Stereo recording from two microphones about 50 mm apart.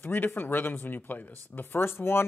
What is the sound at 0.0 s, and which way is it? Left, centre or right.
Speech, left.